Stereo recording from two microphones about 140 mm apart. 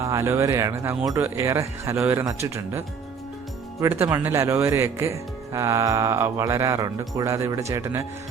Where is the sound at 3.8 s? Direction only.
20° right (ahead or behind).